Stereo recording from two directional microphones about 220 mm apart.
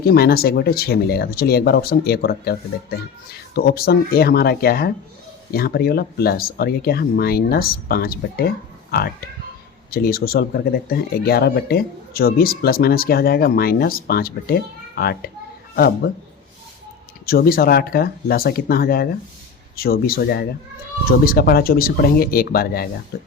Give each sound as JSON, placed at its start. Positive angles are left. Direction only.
{"t": 0.0, "sound": "speech", "side_deg": 45}
{"t": 17.2, "sound": "speech", "side_deg": 45}